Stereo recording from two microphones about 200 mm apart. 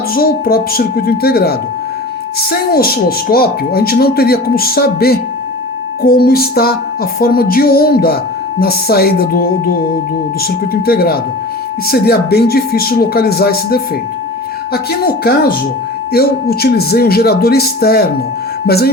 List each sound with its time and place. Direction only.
0.1 s music: 50° left (ahead or behind)
14.7 s speech: 50° left (ahead or behind)
16.1 s music: 50° left (ahead or behind)
18.6 s speech: 50° left (ahead or behind)